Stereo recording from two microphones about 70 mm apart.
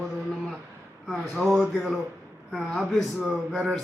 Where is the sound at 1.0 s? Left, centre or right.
Centre.